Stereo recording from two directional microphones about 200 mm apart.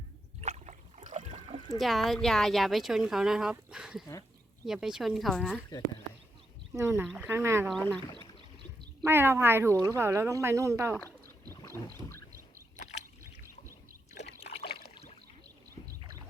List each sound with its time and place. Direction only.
0.4 s boat: 35° right (ahead or behind)
1.8 s speech: centre (ahead or behind)
6.7 s speech: 15° right (ahead or behind)
7.7 s speech: 5° left (ahead or behind)
9.0 s speech: 10° right (ahead or behind)
11.9 s rowboat: 10° left (ahead or behind)
12.7 s a sound: 35° left (ahead or behind)
14.3 s trickle: 30° left (ahead or behind)
16.0 s a sound: 20° right (ahead or behind)